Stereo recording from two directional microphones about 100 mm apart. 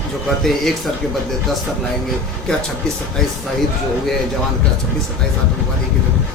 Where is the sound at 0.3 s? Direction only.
Centre (ahead or behind).